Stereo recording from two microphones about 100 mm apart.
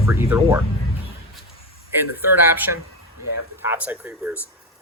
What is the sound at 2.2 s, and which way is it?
Speech, 20° right (ahead or behind).